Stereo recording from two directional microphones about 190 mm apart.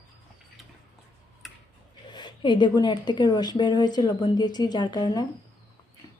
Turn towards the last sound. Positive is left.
turn(degrees=20)  # may be behind; listen again after turning